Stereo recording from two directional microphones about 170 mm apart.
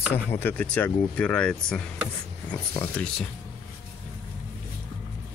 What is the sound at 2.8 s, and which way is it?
Speech, 5° left (ahead or behind).